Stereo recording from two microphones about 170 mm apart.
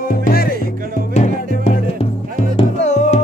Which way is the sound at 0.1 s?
60° left (ahead or behind).